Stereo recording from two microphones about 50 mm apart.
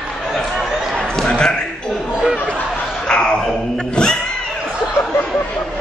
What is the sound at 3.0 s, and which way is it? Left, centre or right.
Music, centre.